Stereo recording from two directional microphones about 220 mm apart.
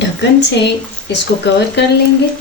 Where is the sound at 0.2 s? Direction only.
50° left (ahead or behind).